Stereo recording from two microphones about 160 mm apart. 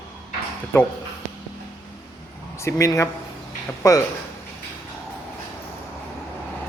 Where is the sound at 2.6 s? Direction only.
20° left (ahead or behind).